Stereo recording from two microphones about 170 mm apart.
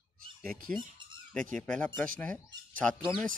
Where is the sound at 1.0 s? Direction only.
25° right (ahead or behind).